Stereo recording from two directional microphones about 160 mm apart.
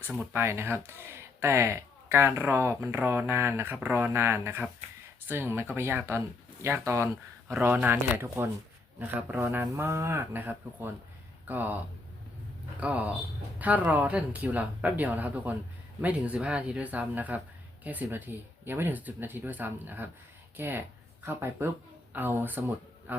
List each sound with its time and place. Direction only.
0.1 s speech: 10° right (ahead or behind)
12.8 s a man's voice: 10° right (ahead or behind)